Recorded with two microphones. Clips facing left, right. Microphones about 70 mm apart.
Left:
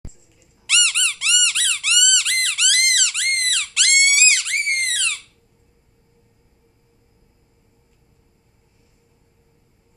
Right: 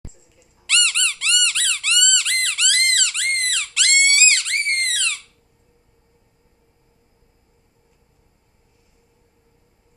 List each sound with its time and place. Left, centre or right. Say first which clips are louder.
0.7 s squeak: even; centre